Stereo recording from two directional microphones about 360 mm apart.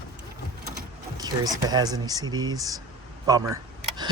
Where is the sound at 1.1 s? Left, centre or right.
Centre.